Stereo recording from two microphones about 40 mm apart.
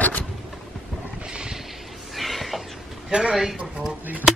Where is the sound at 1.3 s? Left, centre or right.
Right.